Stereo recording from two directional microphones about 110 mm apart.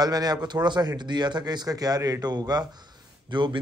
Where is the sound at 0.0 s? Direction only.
35° right (ahead or behind).